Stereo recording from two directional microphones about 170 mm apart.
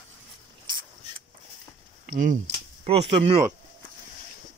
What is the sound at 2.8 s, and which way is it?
Speech, 35° right (ahead or behind).